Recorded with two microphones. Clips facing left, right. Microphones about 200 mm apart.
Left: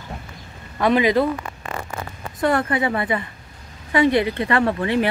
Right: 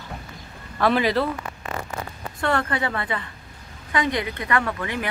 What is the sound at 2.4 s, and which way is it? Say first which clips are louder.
Speech: left 4 dB; 20° left (ahead or behind).